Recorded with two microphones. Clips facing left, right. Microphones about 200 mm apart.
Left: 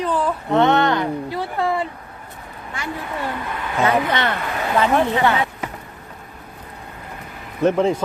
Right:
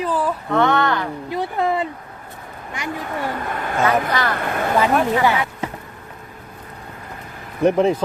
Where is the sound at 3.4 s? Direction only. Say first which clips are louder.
Even; 45° right (ahead or behind).